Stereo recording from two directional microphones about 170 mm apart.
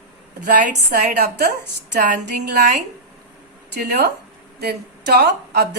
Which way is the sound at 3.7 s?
75° right (ahead or behind).